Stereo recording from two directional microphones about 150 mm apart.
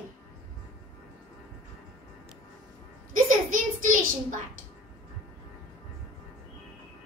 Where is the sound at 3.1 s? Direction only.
60° right (ahead or behind).